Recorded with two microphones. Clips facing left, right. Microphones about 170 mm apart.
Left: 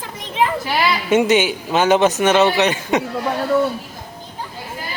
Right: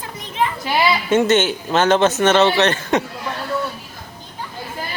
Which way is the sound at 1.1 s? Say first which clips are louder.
Left 2 dB; 15° left (ahead or behind).